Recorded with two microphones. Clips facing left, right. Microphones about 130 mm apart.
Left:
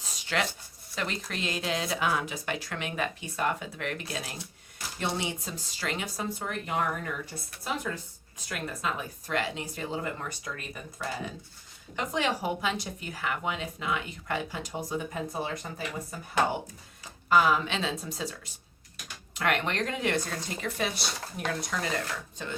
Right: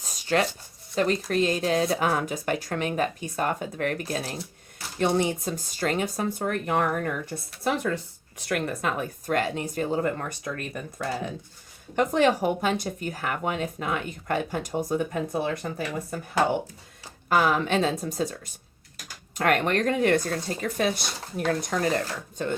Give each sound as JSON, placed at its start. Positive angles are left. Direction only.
{"t": 0.0, "sound": "a sound", "side_deg": -40}
{"t": 0.9, "sound": "speech", "side_deg": -40}
{"t": 17.2, "sound": "speech", "side_deg": -55}
{"t": 19.4, "sound": "speech", "side_deg": -50}